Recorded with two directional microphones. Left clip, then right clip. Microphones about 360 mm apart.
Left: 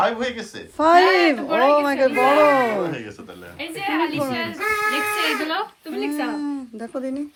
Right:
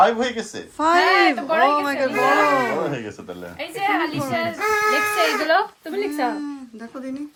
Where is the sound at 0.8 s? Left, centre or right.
Centre.